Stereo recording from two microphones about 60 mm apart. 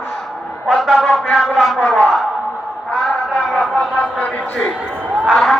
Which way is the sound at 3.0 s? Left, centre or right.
Centre.